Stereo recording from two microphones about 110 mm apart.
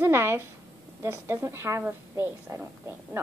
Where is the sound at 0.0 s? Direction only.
25° right (ahead or behind).